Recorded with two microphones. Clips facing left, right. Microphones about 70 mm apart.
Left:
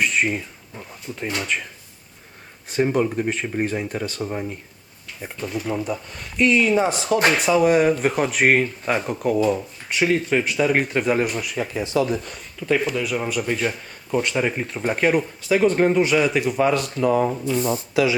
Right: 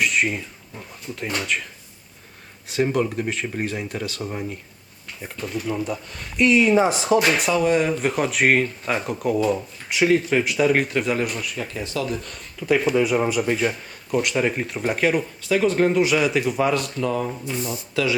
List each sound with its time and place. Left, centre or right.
0.0 s speech: centre
2.6 s speech: centre
7.3 s speech: centre
11.5 s speech: centre
12.0 s speech: centre
17.0 s speech: centre
17.6 s speech: left
17.9 s speech: centre